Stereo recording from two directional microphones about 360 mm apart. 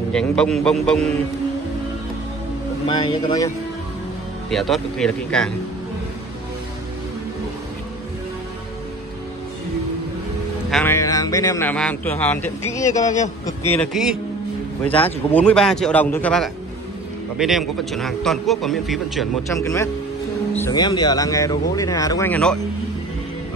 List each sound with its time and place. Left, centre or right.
0.1 s a man's voice: centre
2.9 s a man's voice: centre
4.5 s a man's voice: centre
10.7 s a man's voice: centre
13.1 s a man's voice: centre
14.0 s a man's voice: centre
14.9 s a man's voice: centre
15.3 s a man's voice: centre